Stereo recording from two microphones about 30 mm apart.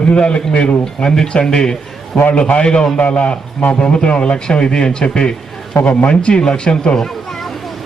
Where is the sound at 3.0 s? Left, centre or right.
Left.